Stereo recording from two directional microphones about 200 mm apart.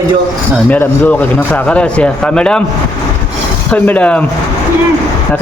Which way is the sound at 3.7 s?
5° left (ahead or behind).